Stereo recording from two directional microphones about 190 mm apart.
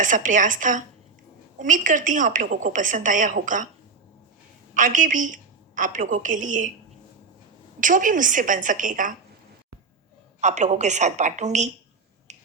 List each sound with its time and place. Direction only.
0.0 s a woman's voice: 45° right (ahead or behind)
4.7 s a woman's voice: 45° right (ahead or behind)
7.8 s a woman's voice: 45° right (ahead or behind)
10.4 s a woman's voice: 40° right (ahead or behind)
12.3 s finger snapping: 40° right (ahead or behind)